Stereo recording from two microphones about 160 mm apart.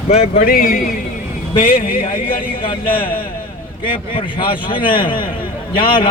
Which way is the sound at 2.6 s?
35° left (ahead or behind).